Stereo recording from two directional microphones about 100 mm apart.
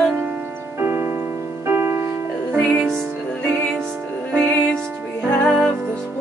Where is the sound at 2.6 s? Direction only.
5° left (ahead or behind).